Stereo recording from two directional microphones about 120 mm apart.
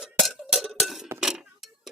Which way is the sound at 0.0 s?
Centre (ahead or behind).